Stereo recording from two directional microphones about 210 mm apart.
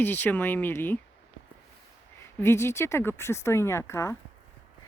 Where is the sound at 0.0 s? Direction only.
10° left (ahead or behind).